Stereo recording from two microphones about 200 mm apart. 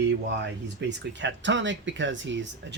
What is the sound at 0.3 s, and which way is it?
Speech, 60° right (ahead or behind).